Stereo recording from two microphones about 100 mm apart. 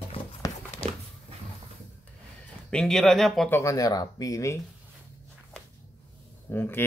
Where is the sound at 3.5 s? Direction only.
30° left (ahead or behind).